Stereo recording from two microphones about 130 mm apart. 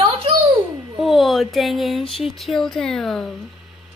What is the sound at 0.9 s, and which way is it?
Speech, centre (ahead or behind).